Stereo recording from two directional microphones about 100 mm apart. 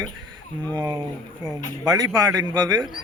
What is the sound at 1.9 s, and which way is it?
Speech, 40° right (ahead or behind).